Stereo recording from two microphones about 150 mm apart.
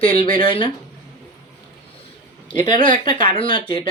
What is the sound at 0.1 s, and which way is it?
Speech, 30° left (ahead or behind).